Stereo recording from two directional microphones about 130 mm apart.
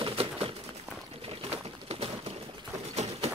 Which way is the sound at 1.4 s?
50° right (ahead or behind).